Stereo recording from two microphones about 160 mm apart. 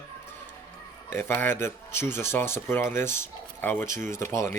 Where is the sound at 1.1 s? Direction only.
15° left (ahead or behind).